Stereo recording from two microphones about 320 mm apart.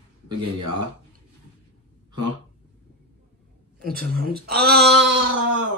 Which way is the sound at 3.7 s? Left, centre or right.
Right.